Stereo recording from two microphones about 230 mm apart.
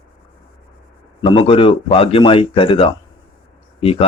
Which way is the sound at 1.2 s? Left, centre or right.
Left.